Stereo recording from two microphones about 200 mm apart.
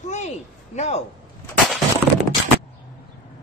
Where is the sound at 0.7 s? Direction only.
30° left (ahead or behind).